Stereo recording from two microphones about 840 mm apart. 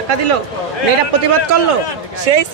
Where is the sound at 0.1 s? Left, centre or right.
Right.